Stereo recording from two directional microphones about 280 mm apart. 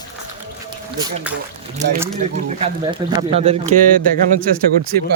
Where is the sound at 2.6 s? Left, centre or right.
Centre.